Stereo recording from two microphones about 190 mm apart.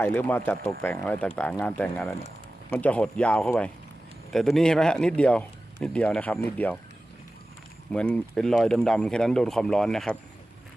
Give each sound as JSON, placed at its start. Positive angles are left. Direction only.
{"t": 0.0, "sound": "speech", "side_deg": 10}
{"t": 7.9, "sound": "speech", "side_deg": 5}